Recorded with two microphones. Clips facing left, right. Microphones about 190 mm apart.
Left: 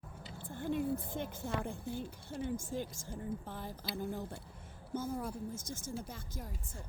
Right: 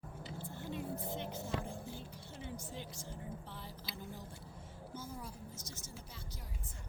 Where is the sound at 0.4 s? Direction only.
50° left (ahead or behind).